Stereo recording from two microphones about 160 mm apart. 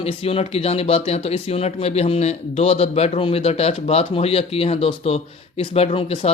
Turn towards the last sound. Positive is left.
turn(degrees=35)  # may be behind; listen again after turning